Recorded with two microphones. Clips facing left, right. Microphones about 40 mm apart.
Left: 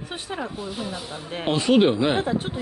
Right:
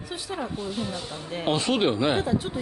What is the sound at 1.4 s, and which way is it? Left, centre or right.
Speech, centre.